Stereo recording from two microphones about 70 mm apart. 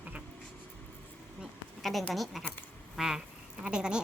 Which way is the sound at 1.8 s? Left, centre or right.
Centre.